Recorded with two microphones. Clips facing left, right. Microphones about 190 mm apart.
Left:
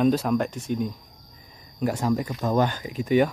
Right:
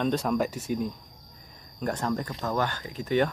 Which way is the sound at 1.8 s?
10° left (ahead or behind).